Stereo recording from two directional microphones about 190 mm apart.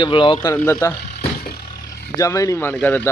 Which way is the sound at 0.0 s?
25° left (ahead or behind).